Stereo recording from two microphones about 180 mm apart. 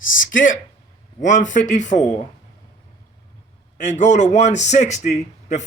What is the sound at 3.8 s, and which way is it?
A man's voice, 40° left (ahead or behind).